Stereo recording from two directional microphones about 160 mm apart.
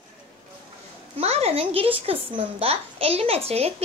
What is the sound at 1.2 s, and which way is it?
A woman's voice, 40° right (ahead or behind).